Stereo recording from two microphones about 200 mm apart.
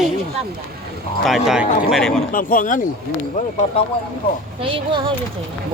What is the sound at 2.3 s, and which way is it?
Speech, 45° left (ahead or behind).